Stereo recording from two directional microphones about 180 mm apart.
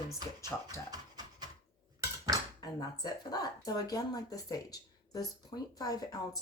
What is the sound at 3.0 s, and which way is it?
Speech, 20° left (ahead or behind).